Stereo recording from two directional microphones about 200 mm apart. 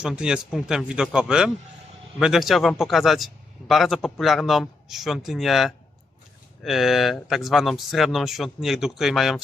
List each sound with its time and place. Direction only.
0.0 s speech: 5° right (ahead or behind)